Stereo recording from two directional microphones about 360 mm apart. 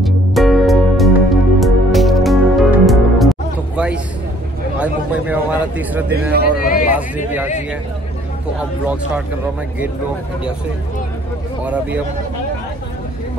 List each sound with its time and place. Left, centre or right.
0.0 s music: centre
4.7 s a man's voice: centre
6.5 s speech: left
6.9 s a man's voice: centre
11.6 s a man's voice: centre